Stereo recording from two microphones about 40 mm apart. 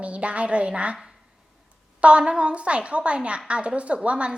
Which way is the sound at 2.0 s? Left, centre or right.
Right.